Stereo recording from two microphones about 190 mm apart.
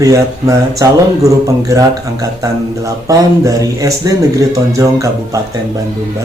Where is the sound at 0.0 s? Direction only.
15° right (ahead or behind).